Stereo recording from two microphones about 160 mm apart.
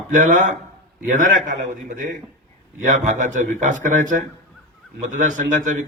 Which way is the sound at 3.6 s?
50° right (ahead or behind).